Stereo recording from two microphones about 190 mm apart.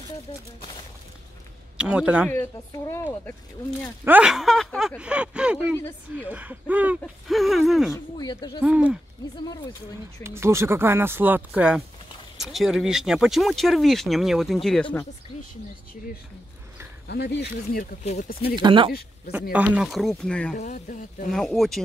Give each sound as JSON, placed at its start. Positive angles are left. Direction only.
{"t": 1.8, "sound": "speech", "side_deg": -5}
{"t": 2.3, "sound": "a woman's voice", "side_deg": 10}
{"t": 4.0, "sound": "speech", "side_deg": -5}
{"t": 7.9, "sound": "speech", "side_deg": 20}
{"t": 8.6, "sound": "speech", "side_deg": -5}
{"t": 10.2, "sound": "speech", "side_deg": -15}
{"t": 17.1, "sound": "speech", "side_deg": 60}
{"t": 18.6, "sound": "speech", "side_deg": -25}
{"t": 19.5, "sound": "speech", "side_deg": -5}
{"t": 20.5, "sound": "speech", "side_deg": 40}
{"t": 21.3, "sound": "speech", "side_deg": 0}